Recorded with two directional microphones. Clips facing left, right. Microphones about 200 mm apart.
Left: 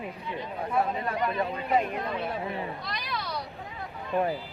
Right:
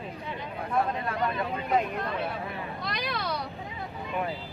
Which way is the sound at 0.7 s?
5° left (ahead or behind).